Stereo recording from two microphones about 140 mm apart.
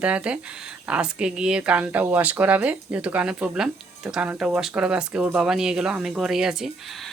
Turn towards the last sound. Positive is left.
turn(degrees=0)  # may be behind; listen again after turning